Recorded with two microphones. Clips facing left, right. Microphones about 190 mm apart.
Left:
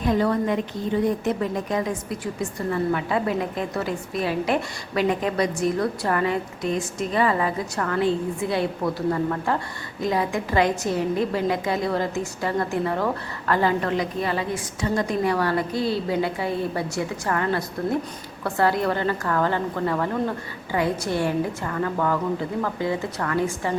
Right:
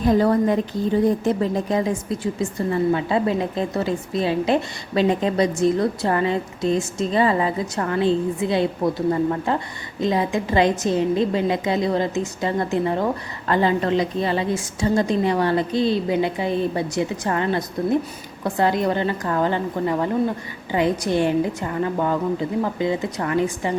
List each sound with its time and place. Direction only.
0.0 s a woman's voice: 35° right (ahead or behind); by 23.7 s 20° right (ahead or behind)